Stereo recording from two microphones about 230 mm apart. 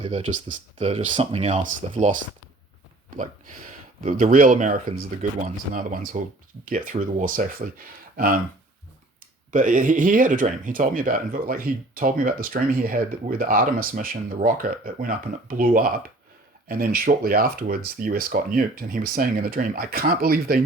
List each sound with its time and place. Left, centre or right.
0.0 s speech: right
3.2 s speech: right
9.5 s speech: right